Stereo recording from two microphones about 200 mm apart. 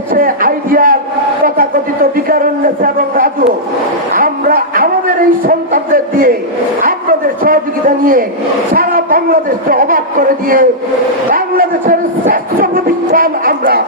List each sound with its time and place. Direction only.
0.1 s a sound: 45° right (ahead or behind)
8.7 s a man's voice: 45° right (ahead or behind)
11.3 s music: 45° right (ahead or behind)